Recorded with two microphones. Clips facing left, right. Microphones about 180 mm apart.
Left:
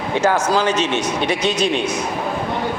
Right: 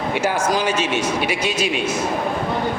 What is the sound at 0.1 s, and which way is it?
A man's voice, 10° right (ahead or behind).